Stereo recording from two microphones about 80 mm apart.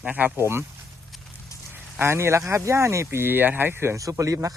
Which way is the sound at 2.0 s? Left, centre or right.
Right.